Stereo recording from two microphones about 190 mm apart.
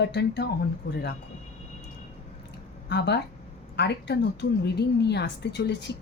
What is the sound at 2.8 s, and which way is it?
A woman's voice, 60° left (ahead or behind).